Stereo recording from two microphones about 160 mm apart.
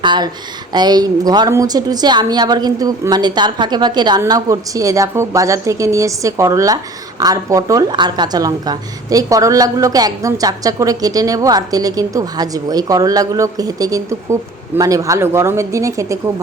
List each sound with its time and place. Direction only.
0.0 s a woman's voice: 30° right (ahead or behind)